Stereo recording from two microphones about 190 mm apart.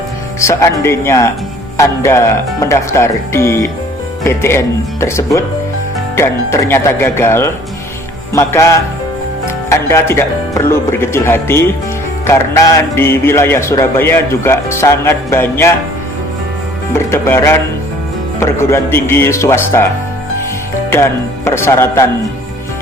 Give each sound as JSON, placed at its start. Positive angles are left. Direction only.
{"t": 0.3, "sound": "a man's voice", "side_deg": 15}
{"t": 16.9, "sound": "a man's voice", "side_deg": 15}
{"t": 20.9, "sound": "a man's voice", "side_deg": 15}